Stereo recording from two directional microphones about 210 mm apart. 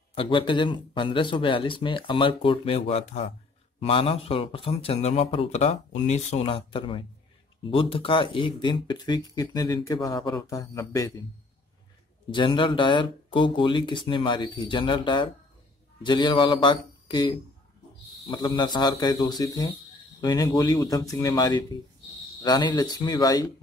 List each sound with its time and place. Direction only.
0.1 s speech: 25° left (ahead or behind)
12.3 s speech: 25° left (ahead or behind)